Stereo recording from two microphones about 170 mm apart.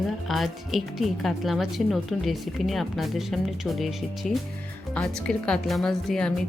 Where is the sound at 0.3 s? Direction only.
Centre (ahead or behind).